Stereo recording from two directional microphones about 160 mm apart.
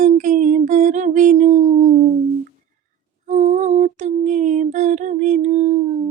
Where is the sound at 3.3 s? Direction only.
50° right (ahead or behind).